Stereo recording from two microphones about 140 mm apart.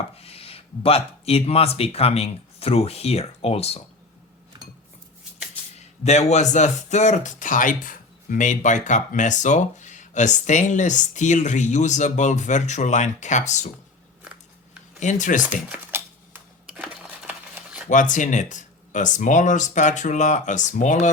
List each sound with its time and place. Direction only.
0.2 s speech: 45° left (ahead or behind)
5.7 s speech: 50° left (ahead or behind)
15.0 s speech: 65° left (ahead or behind)
15.7 s a sound: 15° right (ahead or behind)
17.8 s speech: 65° left (ahead or behind)